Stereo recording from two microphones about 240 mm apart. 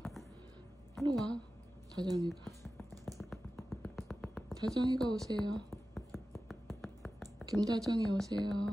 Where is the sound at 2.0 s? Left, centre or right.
Centre.